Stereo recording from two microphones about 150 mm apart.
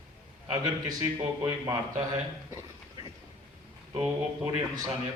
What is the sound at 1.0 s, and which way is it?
A man's voice, 25° right (ahead or behind).